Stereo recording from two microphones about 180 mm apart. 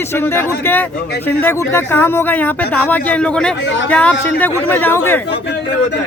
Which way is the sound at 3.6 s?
90° left.